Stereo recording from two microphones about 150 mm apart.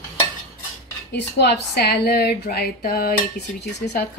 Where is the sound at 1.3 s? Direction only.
90° left.